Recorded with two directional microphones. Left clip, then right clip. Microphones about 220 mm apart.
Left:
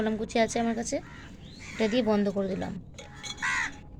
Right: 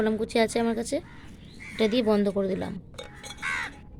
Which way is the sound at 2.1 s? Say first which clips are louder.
Right 3 dB; 15° right (ahead or behind).